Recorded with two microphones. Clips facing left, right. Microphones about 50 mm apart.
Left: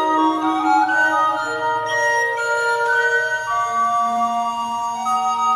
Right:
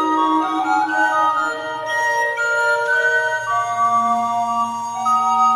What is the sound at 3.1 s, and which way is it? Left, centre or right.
Music, centre.